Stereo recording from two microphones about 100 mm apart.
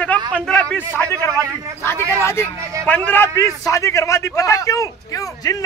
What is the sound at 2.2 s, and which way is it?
A man's voice, 25° left (ahead or behind).